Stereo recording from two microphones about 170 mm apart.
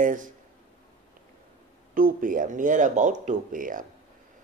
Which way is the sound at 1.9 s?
55° right (ahead or behind).